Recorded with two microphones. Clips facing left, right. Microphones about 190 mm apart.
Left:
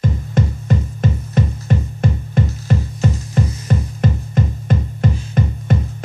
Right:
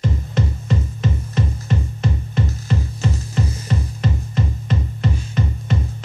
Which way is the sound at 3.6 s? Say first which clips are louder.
Left 4 dB; 50° left (ahead or behind).